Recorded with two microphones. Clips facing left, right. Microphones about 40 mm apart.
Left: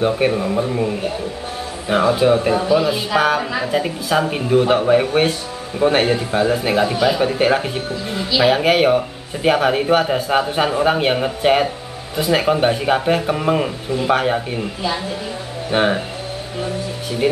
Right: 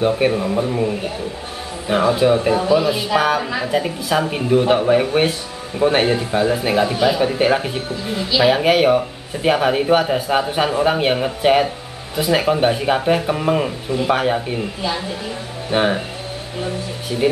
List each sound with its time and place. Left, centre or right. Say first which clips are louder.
0.0 s speech: even; centre